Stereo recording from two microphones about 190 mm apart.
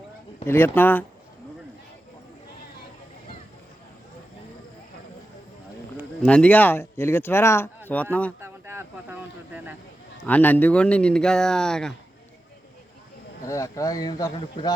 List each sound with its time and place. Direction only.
0.4 s speech: 10° left (ahead or behind)
6.2 s speech: 5° left (ahead or behind)
8.4 s a sound: 10° right (ahead or behind)
10.2 s speech: 10° left (ahead or behind)
13.4 s speech: 15° left (ahead or behind)